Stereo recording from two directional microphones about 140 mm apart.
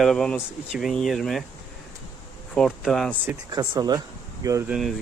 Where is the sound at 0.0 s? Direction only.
5° left (ahead or behind).